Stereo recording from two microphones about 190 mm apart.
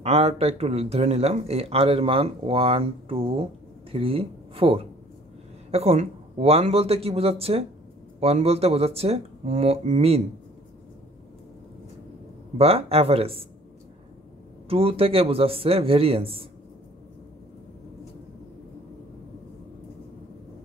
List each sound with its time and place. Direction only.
0.0 s speech: 30° right (ahead or behind)
12.5 s speech: 30° right (ahead or behind)
14.7 s speech: 30° right (ahead or behind)